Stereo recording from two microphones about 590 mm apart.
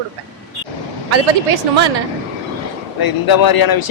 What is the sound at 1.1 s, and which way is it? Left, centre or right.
Speech, right.